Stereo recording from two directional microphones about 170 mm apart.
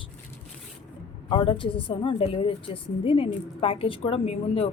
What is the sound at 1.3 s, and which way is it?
A woman's voice, 30° left (ahead or behind).